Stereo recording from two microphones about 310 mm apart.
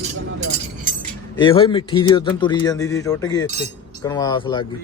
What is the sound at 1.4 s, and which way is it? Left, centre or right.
Speech, centre.